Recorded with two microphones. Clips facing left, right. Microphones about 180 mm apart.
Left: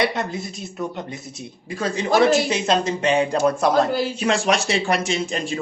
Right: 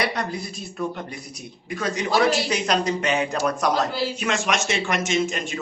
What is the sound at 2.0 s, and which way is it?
Speech, 50° left (ahead or behind).